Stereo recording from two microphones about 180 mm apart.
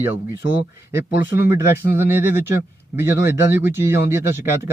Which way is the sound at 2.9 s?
10° right (ahead or behind).